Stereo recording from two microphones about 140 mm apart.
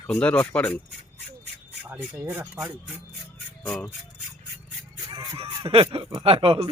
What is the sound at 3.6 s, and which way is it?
Speech, 5° left (ahead or behind).